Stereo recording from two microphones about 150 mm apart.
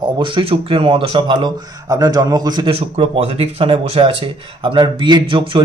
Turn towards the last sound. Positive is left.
turn(degrees=-30)  # may be behind; listen again after turning